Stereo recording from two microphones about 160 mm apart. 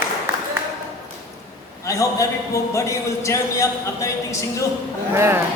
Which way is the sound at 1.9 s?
20° left (ahead or behind).